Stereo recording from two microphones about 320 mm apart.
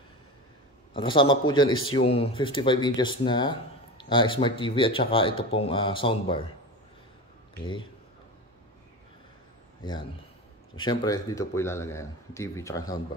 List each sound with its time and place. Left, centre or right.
0.9 s speech: centre
1.7 s a man's voice: left
2.0 s speech: centre
10.8 s speech: centre